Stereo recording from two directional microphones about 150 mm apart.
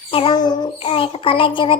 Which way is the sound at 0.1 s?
35° left (ahead or behind).